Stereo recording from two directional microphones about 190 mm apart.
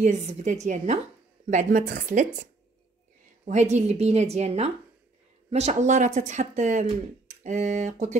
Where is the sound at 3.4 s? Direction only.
35° right (ahead or behind).